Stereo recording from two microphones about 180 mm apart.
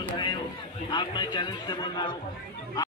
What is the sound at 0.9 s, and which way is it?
Music, 25° left (ahead or behind).